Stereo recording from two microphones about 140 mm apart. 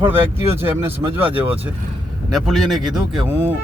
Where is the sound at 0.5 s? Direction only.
15° right (ahead or behind).